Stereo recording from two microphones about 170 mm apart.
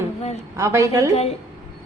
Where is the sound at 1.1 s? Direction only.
40° left (ahead or behind).